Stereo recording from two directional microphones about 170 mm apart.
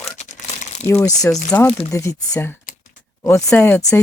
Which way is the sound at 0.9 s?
15° left (ahead or behind).